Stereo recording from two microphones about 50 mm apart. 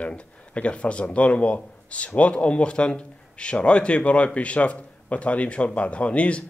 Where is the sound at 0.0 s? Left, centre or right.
Left.